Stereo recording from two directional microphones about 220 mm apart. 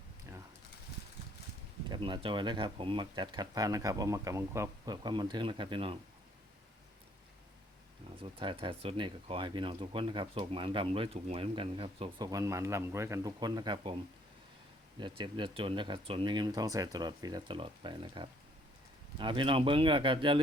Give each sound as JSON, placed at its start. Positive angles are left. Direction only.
{"t": 1.9, "sound": "speech", "side_deg": -25}
{"t": 8.2, "sound": "speech", "side_deg": -20}
{"t": 14.9, "sound": "speech", "side_deg": -20}